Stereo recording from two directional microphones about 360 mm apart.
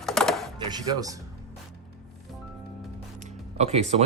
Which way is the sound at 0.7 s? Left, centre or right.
Centre.